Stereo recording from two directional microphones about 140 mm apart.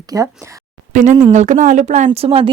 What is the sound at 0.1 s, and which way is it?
Speech, 25° right (ahead or behind).